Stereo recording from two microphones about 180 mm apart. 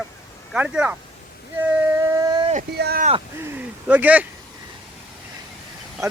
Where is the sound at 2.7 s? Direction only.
65° right (ahead or behind).